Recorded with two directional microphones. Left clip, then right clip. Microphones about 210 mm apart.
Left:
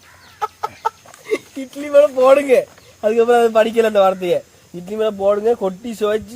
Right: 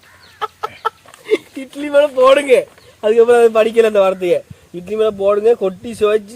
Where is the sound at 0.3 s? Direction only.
40° right (ahead or behind).